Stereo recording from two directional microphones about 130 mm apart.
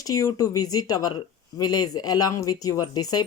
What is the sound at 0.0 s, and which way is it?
Speech, 30° left (ahead or behind).